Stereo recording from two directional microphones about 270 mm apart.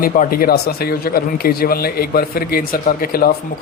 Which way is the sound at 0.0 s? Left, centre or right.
Left.